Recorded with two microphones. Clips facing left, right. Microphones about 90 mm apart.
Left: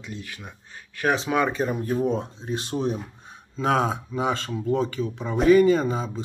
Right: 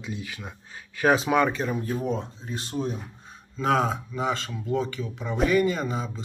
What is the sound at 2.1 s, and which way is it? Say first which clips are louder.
Speech: left 4 dB; 25° left (ahead or behind).